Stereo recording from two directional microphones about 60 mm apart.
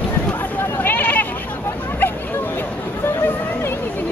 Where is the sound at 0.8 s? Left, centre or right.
Left.